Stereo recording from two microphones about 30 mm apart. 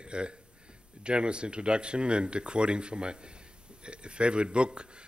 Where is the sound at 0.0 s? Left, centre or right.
Right.